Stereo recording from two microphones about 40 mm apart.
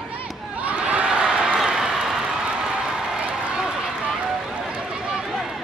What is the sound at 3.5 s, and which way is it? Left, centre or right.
Run, centre.